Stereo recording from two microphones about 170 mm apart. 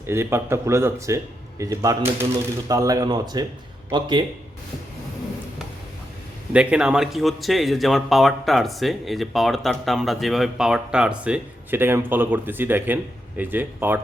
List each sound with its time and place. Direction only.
0.1 s speech: 15° right (ahead or behind)
6.5 s speech: 5° right (ahead or behind)